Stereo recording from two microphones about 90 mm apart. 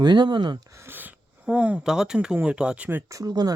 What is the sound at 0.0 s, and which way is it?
Speech, 55° right (ahead or behind).